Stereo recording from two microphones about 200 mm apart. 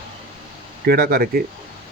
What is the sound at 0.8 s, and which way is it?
Speech, 50° right (ahead or behind).